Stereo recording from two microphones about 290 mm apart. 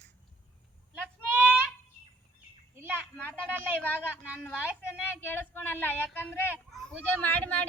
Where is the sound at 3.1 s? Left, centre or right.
Centre.